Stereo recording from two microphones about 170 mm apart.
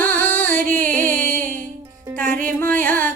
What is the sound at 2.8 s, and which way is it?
Music, 10° left (ahead or behind).